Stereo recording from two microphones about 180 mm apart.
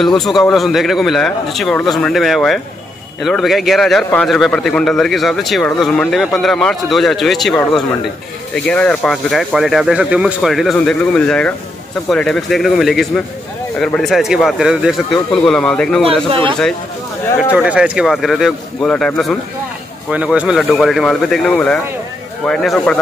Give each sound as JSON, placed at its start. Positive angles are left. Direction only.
{"t": 0.2, "sound": "a man's voice", "side_deg": 0}
{"t": 16.3, "sound": "speech", "side_deg": -30}
{"t": 17.4, "sound": "a man's voice", "side_deg": -5}